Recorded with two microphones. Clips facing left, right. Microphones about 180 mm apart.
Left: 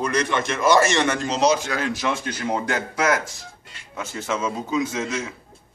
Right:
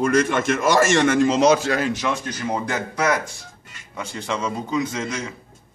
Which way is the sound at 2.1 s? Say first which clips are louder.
Even; 10° left (ahead or behind).